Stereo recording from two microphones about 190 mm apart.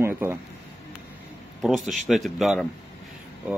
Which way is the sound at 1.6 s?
Centre (ahead or behind).